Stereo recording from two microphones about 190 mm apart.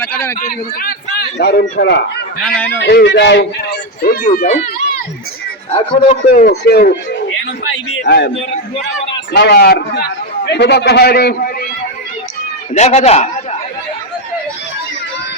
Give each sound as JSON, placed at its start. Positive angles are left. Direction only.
{"t": 0.0, "sound": "a sound", "side_deg": 10}
{"t": 0.3, "sound": "a man's voice", "side_deg": 45}
{"t": 1.4, "sound": "a man's voice", "side_deg": 60}
{"t": 2.6, "sound": "speech", "side_deg": 5}
{"t": 2.8, "sound": "a man's voice", "side_deg": 65}
{"t": 4.4, "sound": "speech", "side_deg": 40}
{"t": 5.7, "sound": "speech", "side_deg": 30}
{"t": 6.4, "sound": "a man's voice", "side_deg": 55}
{"t": 8.5, "sound": "a man's voice", "side_deg": 35}
{"t": 9.3, "sound": "a man's voice", "side_deg": 60}
{"t": 12.7, "sound": "a man's voice", "side_deg": 35}